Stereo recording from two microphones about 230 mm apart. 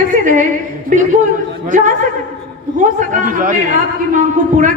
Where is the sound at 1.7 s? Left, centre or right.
Right.